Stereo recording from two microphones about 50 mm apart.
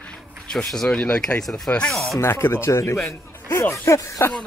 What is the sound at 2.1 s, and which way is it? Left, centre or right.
Speech, left.